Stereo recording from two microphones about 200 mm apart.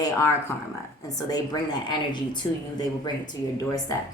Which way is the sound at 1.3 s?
20° left (ahead or behind).